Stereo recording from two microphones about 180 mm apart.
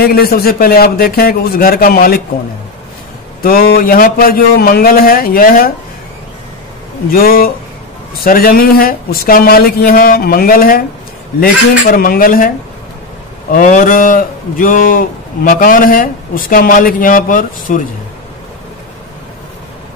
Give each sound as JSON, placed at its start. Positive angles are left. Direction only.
{"t": 0.0, "sound": "a man's voice", "side_deg": 60}
{"t": 3.4, "sound": "speech", "side_deg": 55}
{"t": 7.1, "sound": "a man's voice", "side_deg": 55}
{"t": 13.5, "sound": "speech", "side_deg": 45}